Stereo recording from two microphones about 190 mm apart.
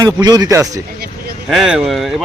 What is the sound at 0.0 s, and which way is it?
Speech, 20° right (ahead or behind).